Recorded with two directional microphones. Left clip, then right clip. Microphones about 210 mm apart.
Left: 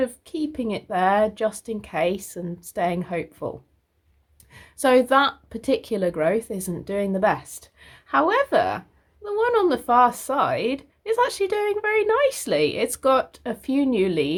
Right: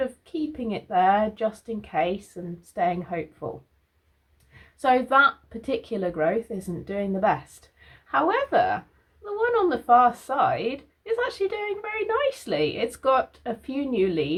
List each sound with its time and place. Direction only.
0.0 s speech: 40° left (ahead or behind)
4.5 s speech: 45° left (ahead or behind)